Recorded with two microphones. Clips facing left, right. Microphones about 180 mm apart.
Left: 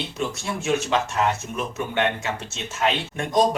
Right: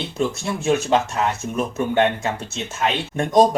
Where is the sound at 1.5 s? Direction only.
40° right (ahead or behind).